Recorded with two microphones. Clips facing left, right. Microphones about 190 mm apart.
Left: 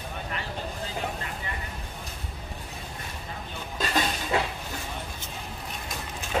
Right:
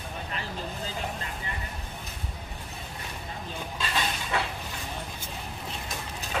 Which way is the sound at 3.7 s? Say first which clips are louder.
Left 5 dB; 40° left (ahead or behind).